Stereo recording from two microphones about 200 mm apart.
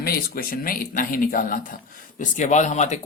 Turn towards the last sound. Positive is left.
turn(degrees=35)  # may be behind; listen again after turning